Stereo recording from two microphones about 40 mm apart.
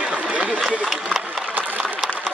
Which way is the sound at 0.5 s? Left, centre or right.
Centre.